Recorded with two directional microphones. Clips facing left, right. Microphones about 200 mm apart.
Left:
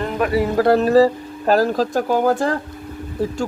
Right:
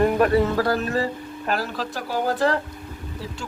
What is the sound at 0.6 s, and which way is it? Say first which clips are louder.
Speech: left 9 dB; 30° left (ahead or behind).